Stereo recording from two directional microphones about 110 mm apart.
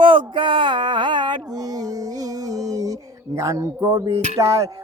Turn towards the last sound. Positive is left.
turn(degrees=-30)  # may be behind; listen again after turning